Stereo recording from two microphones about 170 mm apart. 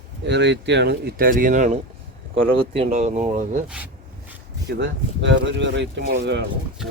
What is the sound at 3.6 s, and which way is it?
Speech, 5° right (ahead or behind).